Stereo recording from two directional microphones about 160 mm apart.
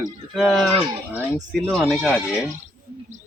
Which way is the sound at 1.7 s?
Centre (ahead or behind).